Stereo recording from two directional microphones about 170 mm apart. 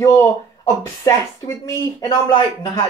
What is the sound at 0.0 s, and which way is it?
Speech, 15° left (ahead or behind).